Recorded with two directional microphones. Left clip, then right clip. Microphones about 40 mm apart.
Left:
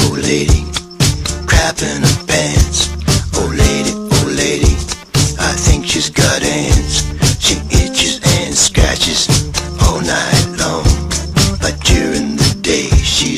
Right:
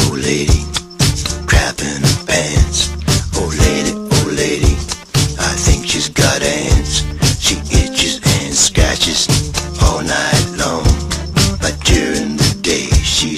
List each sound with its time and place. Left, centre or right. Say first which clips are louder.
0.0 s music: left 2 dB; right